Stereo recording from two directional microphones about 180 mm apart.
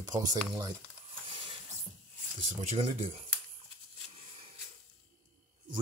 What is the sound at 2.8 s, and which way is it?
Speech, 35° right (ahead or behind).